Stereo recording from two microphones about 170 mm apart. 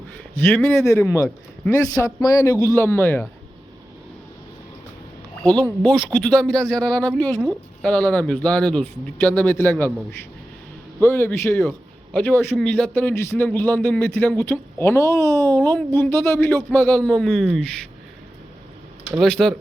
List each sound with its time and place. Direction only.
0.3 s speech: 10° left (ahead or behind)
1.0 s speech: 15° left (ahead or behind)
5.4 s speech: 5° left (ahead or behind)
19.2 s speech: centre (ahead or behind)